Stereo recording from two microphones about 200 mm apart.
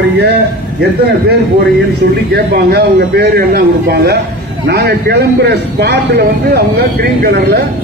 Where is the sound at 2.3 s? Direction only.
50° right (ahead or behind).